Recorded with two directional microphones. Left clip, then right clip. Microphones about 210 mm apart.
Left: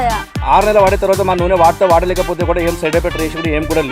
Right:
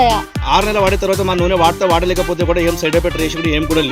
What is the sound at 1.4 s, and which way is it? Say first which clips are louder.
Speech: left 3 dB; 55° right (ahead or behind).